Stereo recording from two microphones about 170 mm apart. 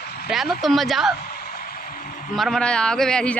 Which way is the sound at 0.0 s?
65° left (ahead or behind).